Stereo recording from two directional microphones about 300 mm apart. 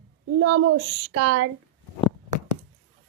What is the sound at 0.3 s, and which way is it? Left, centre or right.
Speech, right.